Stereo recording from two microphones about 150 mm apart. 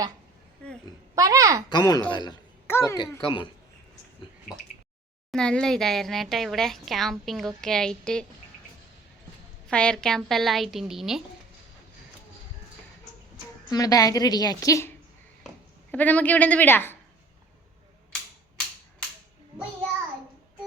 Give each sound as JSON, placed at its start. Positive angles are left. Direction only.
{"t": 1.1, "sound": "a child's voice", "side_deg": -20}
{"t": 1.7, "sound": "a woman's voice", "side_deg": 25}
{"t": 3.2, "sound": "speech", "side_deg": 35}
{"t": 5.3, "sound": "a woman's voice", "side_deg": 5}
{"t": 9.6, "sound": "a woman's voice", "side_deg": 5}
{"t": 13.7, "sound": "a woman's voice", "side_deg": 25}